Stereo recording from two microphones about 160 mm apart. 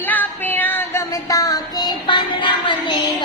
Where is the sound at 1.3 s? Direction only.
20° left (ahead or behind).